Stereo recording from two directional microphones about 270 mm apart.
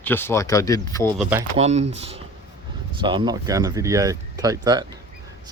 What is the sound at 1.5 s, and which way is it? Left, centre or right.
Speech, right.